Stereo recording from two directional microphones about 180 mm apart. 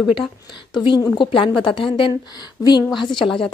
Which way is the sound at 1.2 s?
30° left (ahead or behind).